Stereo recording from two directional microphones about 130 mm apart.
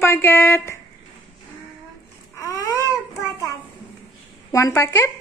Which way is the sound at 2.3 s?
25° left (ahead or behind).